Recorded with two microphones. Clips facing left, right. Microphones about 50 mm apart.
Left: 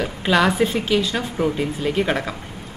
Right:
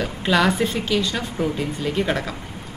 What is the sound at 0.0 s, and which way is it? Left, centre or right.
A woman's voice, centre.